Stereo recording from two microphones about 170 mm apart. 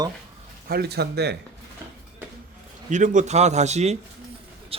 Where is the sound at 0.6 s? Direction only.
70° right (ahead or behind).